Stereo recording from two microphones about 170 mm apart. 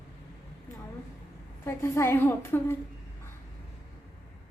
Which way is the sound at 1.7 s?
15° left (ahead or behind).